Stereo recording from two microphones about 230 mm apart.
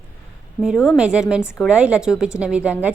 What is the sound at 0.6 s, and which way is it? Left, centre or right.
Speech, centre.